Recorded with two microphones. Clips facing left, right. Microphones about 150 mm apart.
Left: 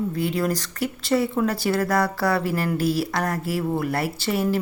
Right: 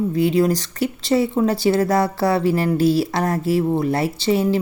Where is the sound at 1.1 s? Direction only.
25° right (ahead or behind).